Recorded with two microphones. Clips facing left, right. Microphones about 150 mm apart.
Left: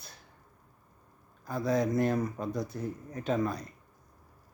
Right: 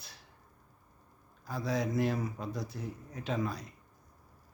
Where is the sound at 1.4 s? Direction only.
Centre (ahead or behind).